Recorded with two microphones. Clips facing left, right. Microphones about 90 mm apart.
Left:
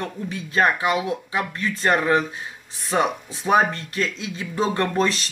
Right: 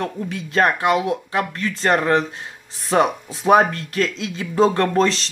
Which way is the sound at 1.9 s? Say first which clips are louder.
Right 2 dB; 45° right (ahead or behind).